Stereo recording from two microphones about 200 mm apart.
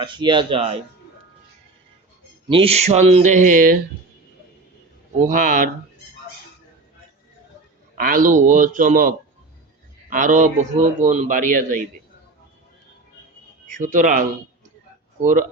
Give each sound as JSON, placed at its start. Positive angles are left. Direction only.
{"t": 0.0, "sound": "speech", "side_deg": -25}
{"t": 2.5, "sound": "speech", "side_deg": -30}
{"t": 5.2, "sound": "speech", "side_deg": -40}
{"t": 7.9, "sound": "speech", "side_deg": -45}
{"t": 13.7, "sound": "speech", "side_deg": -40}